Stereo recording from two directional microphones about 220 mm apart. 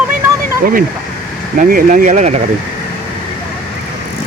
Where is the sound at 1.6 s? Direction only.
40° right (ahead or behind).